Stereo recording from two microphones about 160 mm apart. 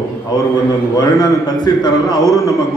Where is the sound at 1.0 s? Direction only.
25° left (ahead or behind).